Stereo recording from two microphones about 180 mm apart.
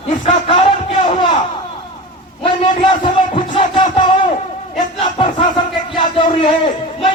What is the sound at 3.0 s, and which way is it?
Music, 30° left (ahead or behind).